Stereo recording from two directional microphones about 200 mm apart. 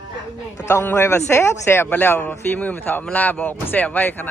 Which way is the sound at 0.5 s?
15° left (ahead or behind).